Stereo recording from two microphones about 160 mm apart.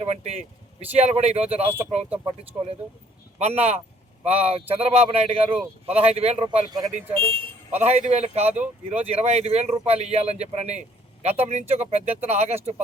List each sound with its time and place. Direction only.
0.0 s speech: 40° right (ahead or behind)
3.3 s speech: 40° right (ahead or behind)
6.7 s speech: 25° right (ahead or behind)
6.9 s speech: 35° right (ahead or behind)